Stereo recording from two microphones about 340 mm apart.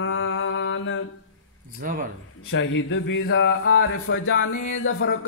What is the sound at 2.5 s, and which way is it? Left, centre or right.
Music, left.